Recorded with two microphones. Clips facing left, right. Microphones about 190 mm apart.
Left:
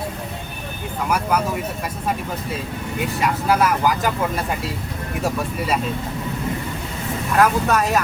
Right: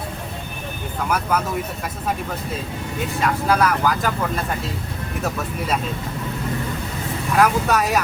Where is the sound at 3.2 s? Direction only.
15° left (ahead or behind).